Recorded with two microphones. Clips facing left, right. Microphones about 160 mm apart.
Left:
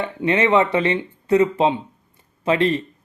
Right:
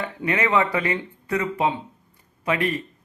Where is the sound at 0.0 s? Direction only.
25° left (ahead or behind).